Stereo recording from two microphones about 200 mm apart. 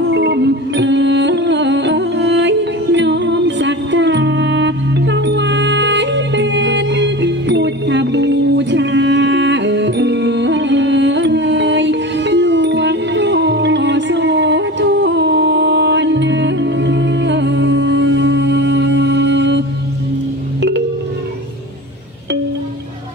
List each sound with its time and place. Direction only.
0.1 s music: 60° right (ahead or behind)